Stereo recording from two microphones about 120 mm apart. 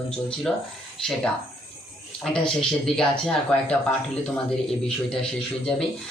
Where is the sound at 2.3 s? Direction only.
5° left (ahead or behind).